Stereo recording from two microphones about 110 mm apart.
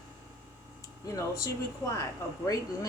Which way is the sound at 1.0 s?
30° left (ahead or behind).